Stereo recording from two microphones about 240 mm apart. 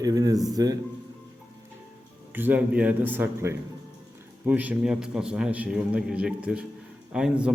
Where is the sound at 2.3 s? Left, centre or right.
Centre.